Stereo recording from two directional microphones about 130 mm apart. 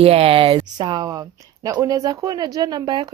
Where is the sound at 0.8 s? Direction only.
35° right (ahead or behind).